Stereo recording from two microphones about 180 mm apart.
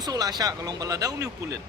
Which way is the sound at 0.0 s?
20° right (ahead or behind).